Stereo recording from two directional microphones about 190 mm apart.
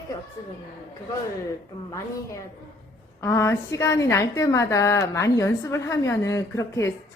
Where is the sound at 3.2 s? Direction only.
15° left (ahead or behind).